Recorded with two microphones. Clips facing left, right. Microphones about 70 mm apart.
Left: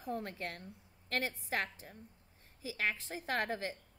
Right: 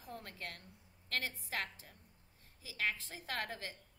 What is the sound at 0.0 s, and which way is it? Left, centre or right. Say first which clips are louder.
Speech: left 8 dB; left.